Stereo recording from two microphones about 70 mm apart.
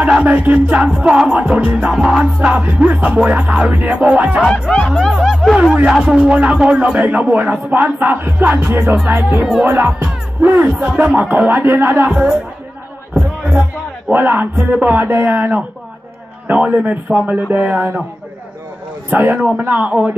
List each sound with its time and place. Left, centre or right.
0.0 s a man's voice: right
0.8 s a man's voice: centre
4.5 s speech: centre
4.9 s a man's voice: centre; by 9.4 s right
9.4 s speech: centre
9.7 s a man's voice: right
14.1 s a man's voice: right
19.0 s a man's voice: right